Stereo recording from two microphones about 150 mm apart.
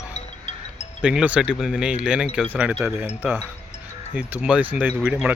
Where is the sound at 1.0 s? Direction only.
5° right (ahead or behind).